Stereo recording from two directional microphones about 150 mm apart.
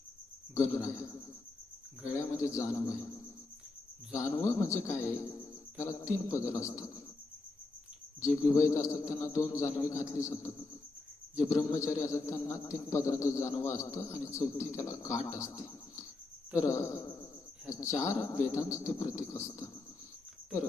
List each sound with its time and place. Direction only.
0.6 s a man's voice: 20° left (ahead or behind)
2.4 s a man's voice: 20° left (ahead or behind)
4.1 s a man's voice: 20° left (ahead or behind)
8.2 s a man's voice: 20° left (ahead or behind)